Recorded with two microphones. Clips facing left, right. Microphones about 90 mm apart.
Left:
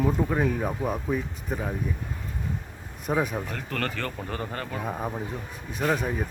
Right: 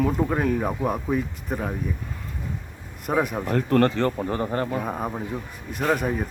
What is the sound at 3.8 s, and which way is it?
Speech, 25° right (ahead or behind).